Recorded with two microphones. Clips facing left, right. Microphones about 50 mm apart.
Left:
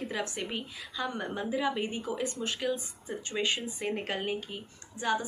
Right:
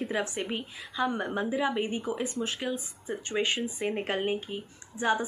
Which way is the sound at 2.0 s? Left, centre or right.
Right.